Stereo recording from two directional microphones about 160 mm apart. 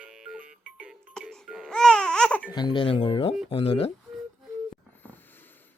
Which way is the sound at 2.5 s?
30° left (ahead or behind).